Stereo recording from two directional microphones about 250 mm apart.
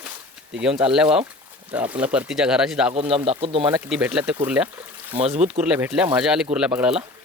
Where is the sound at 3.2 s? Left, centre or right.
Right.